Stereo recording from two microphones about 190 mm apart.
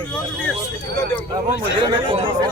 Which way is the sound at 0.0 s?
5° left (ahead or behind).